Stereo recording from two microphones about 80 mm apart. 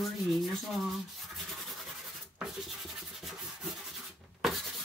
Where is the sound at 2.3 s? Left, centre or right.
Centre.